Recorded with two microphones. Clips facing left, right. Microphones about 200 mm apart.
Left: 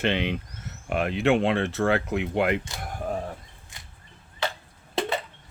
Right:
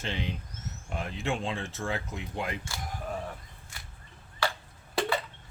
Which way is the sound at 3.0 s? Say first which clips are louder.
Left 7 dB; 40° left (ahead or behind).